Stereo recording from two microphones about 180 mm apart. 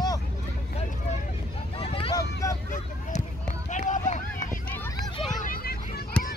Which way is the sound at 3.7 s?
45° left (ahead or behind).